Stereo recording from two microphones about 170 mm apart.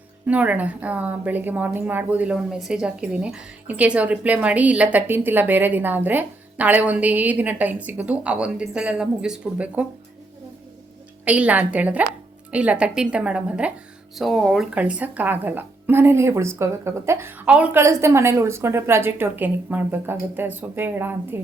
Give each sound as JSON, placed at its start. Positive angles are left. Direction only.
{"t": 0.3, "sound": "a woman's voice", "side_deg": -10}
{"t": 11.3, "sound": "a woman's voice", "side_deg": -10}